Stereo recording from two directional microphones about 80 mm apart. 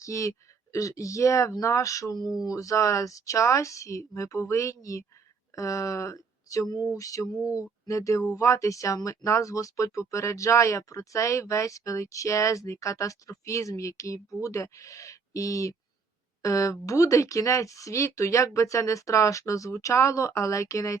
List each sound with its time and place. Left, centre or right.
0.0 s speech: left